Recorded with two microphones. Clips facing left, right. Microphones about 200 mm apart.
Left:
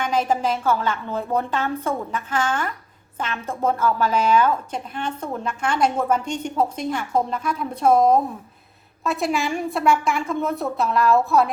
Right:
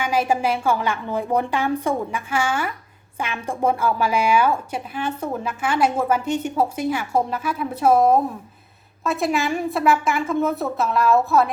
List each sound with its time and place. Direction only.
0.0 s a woman's voice: 10° right (ahead or behind)